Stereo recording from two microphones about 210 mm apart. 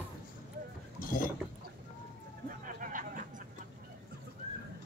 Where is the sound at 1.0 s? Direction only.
45° left (ahead or behind).